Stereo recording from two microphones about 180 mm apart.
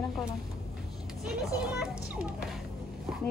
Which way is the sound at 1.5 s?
5° right (ahead or behind).